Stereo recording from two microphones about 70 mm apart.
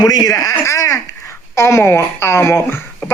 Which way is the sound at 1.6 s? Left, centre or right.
Left.